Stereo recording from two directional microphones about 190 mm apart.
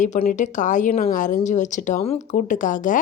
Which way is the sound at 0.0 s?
45° left (ahead or behind).